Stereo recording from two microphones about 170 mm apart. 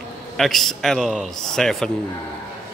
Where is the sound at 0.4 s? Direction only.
Centre (ahead or behind).